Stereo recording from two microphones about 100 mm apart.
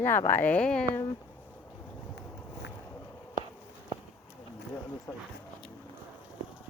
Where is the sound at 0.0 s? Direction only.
20° left (ahead or behind).